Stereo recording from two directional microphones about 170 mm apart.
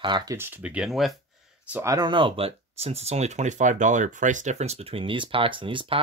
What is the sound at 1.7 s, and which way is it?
Speech, 20° right (ahead or behind).